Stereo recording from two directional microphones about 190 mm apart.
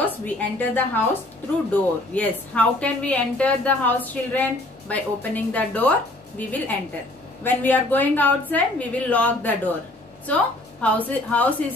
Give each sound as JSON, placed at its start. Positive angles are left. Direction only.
{"t": 0.0, "sound": "a woman's voice", "side_deg": 10}
{"t": 10.8, "sound": "a woman's voice", "side_deg": 10}